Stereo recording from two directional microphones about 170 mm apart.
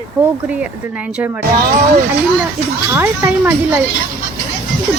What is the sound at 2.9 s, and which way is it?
Speech, 15° right (ahead or behind).